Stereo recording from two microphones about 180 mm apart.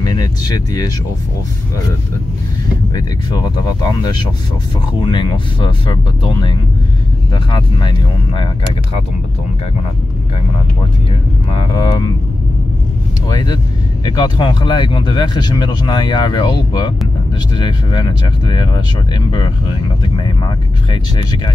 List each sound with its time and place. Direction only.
0.0 s speech: 20° left (ahead or behind)
5.0 s speech: 25° left (ahead or behind)
11.5 s speech: 30° left (ahead or behind)
13.3 s speech: 20° left (ahead or behind)